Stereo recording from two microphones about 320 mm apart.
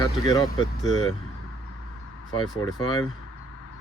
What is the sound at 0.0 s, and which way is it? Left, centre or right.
Speech, centre.